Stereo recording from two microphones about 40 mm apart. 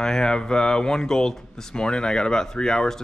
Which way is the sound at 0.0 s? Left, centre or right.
Centre.